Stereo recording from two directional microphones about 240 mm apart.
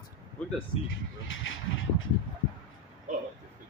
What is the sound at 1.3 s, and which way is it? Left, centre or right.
Speech, left.